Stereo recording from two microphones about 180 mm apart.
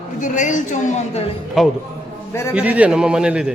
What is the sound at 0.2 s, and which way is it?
A woman's voice, 45° left (ahead or behind).